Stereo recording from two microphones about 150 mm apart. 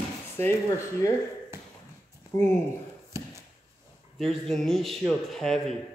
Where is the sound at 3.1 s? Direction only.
20° right (ahead or behind).